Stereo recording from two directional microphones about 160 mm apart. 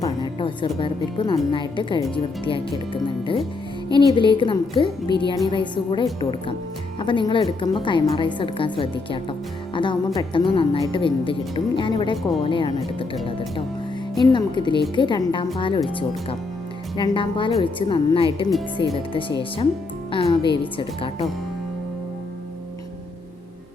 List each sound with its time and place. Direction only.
0.0 s music: 30° left (ahead or behind)
0.8 s a woman's voice: 30° left (ahead or behind)
14.2 s a woman's voice: 30° left (ahead or behind)
17.0 s a woman's voice: 30° left (ahead or behind)